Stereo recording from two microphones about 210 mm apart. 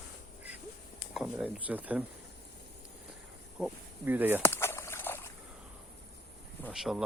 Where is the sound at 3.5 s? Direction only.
5° right (ahead or behind).